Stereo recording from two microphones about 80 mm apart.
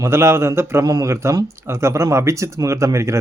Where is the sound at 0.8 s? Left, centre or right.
Right.